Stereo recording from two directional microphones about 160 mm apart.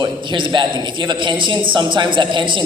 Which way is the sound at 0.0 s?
30° right (ahead or behind).